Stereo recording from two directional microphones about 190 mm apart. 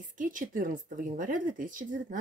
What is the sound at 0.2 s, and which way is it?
Speech, 45° right (ahead or behind).